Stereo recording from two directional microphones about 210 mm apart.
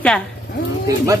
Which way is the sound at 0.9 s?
15° right (ahead or behind).